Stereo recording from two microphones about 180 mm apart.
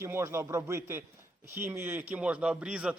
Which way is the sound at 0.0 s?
15° right (ahead or behind).